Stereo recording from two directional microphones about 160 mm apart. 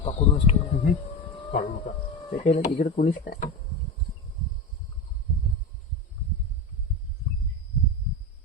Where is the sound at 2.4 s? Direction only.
55° left (ahead or behind).